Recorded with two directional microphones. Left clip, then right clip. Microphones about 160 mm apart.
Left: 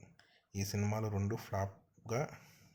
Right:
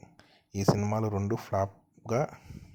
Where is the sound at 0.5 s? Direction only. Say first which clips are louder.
Right 12 dB; 40° right (ahead or behind).